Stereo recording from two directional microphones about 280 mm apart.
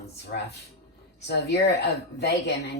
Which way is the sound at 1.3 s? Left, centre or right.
Left.